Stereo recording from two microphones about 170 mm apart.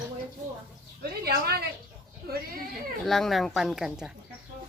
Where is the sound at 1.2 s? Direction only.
70° right (ahead or behind).